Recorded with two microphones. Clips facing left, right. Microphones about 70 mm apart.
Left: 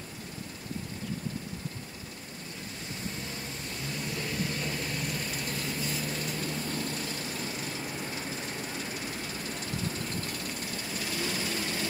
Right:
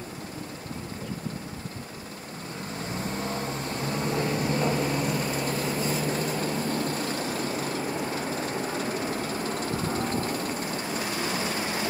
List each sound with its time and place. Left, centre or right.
3.2 s vehicle: right